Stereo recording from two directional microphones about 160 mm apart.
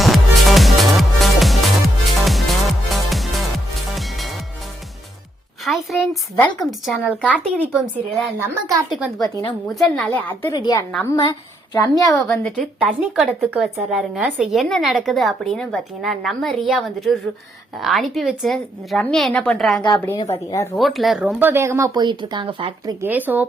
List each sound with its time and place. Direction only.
0.0 s music: centre (ahead or behind)
5.6 s a sound: centre (ahead or behind)
6.6 s speech: centre (ahead or behind)
7.6 s speech: 10° right (ahead or behind)
8.9 s speech: centre (ahead or behind)
10.1 s a woman's voice: 10° left (ahead or behind)
10.5 s a woman's voice: 25° left (ahead or behind)
12.4 s speech: 5° left (ahead or behind)
12.9 s speech: 10° right (ahead or behind)
20.3 s a woman's voice: 20° left (ahead or behind)
20.7 s speech: centre (ahead or behind); by 23.0 s 30° right (ahead or behind)
23.0 s speech: 10° right (ahead or behind)